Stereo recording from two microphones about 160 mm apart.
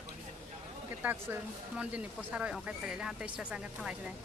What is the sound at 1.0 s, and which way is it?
Speech, 10° right (ahead or behind).